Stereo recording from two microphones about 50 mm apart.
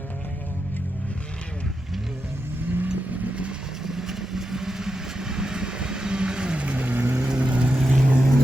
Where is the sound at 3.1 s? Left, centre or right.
Right.